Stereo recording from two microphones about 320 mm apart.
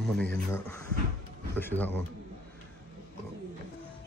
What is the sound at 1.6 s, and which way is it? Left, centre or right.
Speech, centre.